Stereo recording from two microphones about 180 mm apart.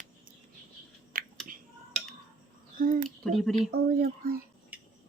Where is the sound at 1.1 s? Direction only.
50° right (ahead or behind).